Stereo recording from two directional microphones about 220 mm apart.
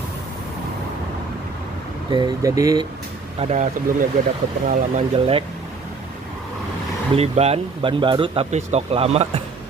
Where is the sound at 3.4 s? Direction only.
30° right (ahead or behind).